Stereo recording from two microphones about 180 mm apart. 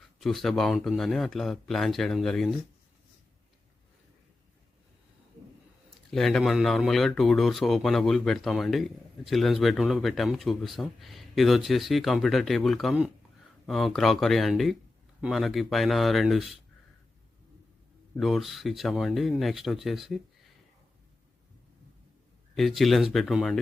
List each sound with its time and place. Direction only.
0.2 s speech: centre (ahead or behind)
6.1 s speech: centre (ahead or behind)
18.2 s speech: centre (ahead or behind)
22.5 s speech: centre (ahead or behind)